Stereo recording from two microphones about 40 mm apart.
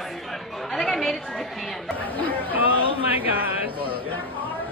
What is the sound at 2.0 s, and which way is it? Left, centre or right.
Speech, left.